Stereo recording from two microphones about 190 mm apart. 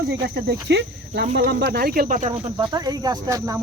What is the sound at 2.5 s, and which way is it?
Speech, 20° right (ahead or behind).